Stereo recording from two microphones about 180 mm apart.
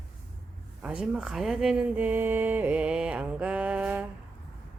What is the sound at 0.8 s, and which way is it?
Speech, 5° right (ahead or behind).